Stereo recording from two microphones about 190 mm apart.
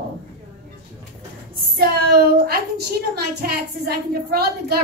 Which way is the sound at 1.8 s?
55° right (ahead or behind).